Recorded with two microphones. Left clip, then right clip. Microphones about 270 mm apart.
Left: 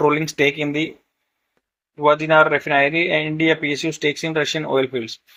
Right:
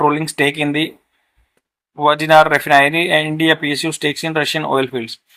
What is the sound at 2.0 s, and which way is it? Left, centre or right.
Speech, centre.